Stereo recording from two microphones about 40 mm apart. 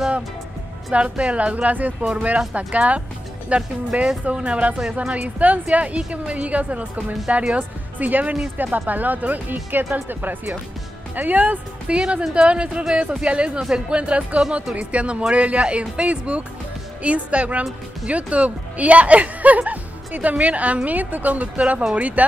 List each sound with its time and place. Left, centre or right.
0.9 s a woman's voice: right
7.5 s speech: right
11.1 s a woman's voice: right
12.0 s a woman's voice: right